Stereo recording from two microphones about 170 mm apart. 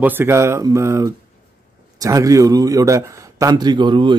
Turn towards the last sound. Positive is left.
turn(degrees=-30)  # may be behind; listen again after turning